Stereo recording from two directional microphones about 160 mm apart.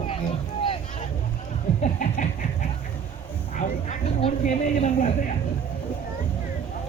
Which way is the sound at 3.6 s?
50° left (ahead or behind).